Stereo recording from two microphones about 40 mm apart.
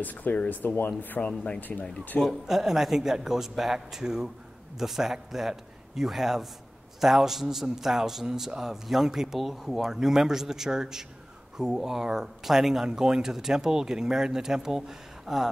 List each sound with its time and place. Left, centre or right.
0.0 s speech: left
1.7 s speech: centre
2.1 s speech: centre